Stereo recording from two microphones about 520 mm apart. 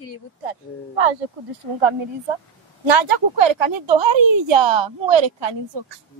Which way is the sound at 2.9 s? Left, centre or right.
Right.